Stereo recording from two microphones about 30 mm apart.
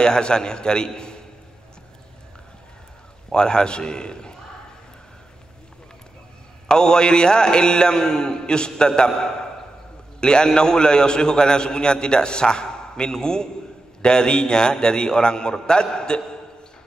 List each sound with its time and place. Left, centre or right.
0.0 s a man's voice: left
3.3 s a man's voice: left
6.7 s a man's voice: left